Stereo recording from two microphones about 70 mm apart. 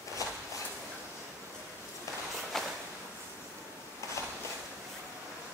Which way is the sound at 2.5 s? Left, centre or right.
Centre.